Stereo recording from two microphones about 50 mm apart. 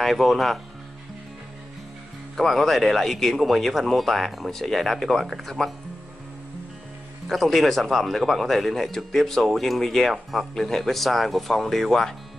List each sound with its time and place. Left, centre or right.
0.0 s speech: centre
2.3 s speech: centre
7.2 s speech: centre